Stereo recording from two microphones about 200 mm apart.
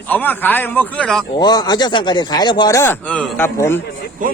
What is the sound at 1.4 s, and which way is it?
Speech, 20° left (ahead or behind).